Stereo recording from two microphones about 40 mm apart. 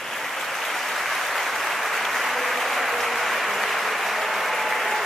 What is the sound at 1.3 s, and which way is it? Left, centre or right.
Applause, centre.